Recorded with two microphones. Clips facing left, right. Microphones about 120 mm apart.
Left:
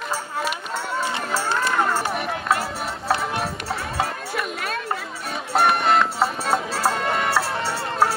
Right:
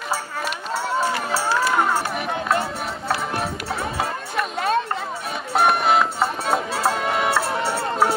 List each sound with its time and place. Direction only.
2.1 s run: centre (ahead or behind)
4.6 s a sound: 25° right (ahead or behind)
5.5 s music: centre (ahead or behind)